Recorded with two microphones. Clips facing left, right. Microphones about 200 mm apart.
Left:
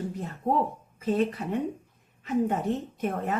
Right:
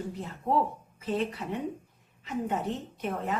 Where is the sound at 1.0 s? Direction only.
50° left (ahead or behind).